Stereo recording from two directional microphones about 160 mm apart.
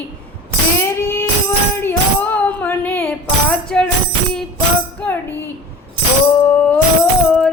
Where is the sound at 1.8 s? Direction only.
10° left (ahead or behind).